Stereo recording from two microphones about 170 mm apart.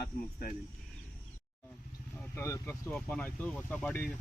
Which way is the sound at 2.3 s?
15° left (ahead or behind).